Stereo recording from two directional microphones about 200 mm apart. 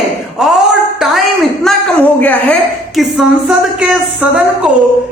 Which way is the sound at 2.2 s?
5° left (ahead or behind).